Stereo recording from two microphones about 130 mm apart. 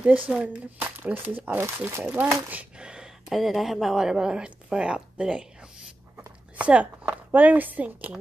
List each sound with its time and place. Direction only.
0.3 s speech: 10° right (ahead or behind)
2.5 s speech: 5° right (ahead or behind)
6.6 s speech: 10° right (ahead or behind)